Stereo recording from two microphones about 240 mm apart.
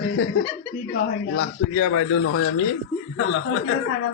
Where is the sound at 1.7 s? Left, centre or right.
Left.